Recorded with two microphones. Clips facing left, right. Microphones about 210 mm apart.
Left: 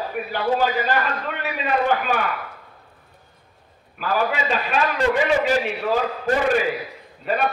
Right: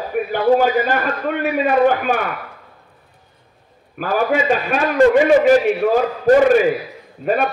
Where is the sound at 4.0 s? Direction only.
50° right (ahead or behind).